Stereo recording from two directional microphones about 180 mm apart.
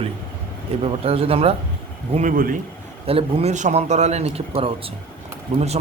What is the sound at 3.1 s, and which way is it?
A man's voice, 30° right (ahead or behind).